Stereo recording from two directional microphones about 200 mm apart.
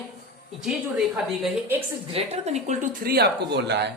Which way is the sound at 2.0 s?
30° right (ahead or behind).